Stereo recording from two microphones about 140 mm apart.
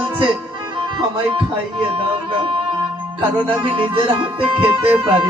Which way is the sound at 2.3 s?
35° right (ahead or behind).